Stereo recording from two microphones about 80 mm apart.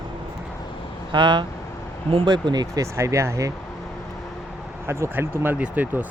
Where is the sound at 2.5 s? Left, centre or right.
Right.